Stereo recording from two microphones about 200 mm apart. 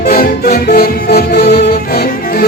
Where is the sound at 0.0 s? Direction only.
50° left (ahead or behind).